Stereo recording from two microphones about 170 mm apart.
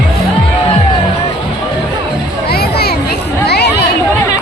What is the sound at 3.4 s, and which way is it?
Chatter, 80° left.